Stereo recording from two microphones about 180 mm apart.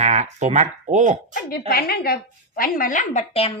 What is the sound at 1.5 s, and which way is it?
A woman's voice, 55° left (ahead or behind).